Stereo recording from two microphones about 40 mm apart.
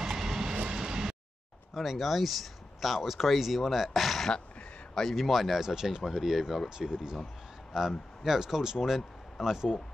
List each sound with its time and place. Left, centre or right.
0.0 s vehicle: centre
1.7 s speech: centre
5.6 s speech: centre
6.9 s speech: centre